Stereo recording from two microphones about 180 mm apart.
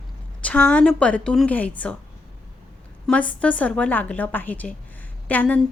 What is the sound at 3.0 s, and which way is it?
A woman's voice, 5° left (ahead or behind).